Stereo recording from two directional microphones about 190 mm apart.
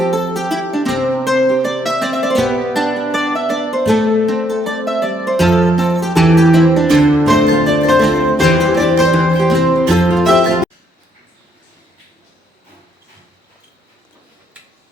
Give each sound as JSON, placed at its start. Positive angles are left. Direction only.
{"t": 0.0, "sound": "music", "side_deg": 0}